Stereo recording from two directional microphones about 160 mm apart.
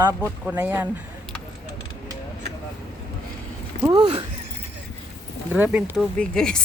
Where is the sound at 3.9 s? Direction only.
30° right (ahead or behind).